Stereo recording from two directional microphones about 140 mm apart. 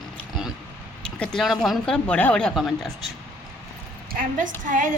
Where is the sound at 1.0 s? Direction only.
5° left (ahead or behind).